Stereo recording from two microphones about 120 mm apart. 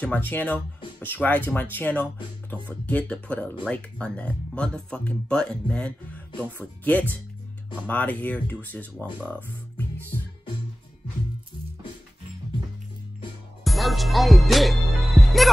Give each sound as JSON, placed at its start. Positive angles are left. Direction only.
{"t": 0.0, "sound": "speech", "side_deg": 15}
{"t": 13.7, "sound": "music", "side_deg": 0}